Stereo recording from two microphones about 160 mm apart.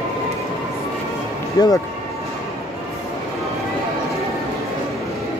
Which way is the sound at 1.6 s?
25° left (ahead or behind).